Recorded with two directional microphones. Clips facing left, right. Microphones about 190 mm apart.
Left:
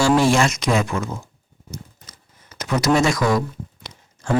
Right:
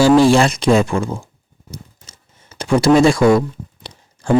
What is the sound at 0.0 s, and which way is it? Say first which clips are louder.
Speech: right 6 dB; 30° right (ahead or behind).